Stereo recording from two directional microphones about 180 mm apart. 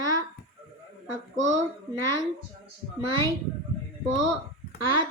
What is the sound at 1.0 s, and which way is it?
Speech, 90° right.